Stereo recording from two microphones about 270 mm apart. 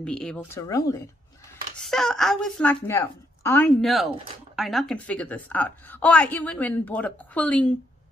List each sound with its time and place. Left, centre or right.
0.0 s speech: centre
1.8 s a woman's voice: centre